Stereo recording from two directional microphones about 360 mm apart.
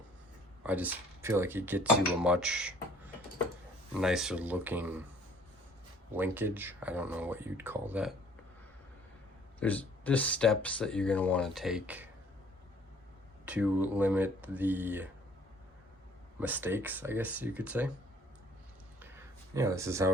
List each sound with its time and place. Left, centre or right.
0.6 s speech: centre
3.9 s speech: centre
6.1 s speech: centre
9.6 s speech: centre
13.4 s speech: centre
16.4 s speech: centre
18.9 s a sound: centre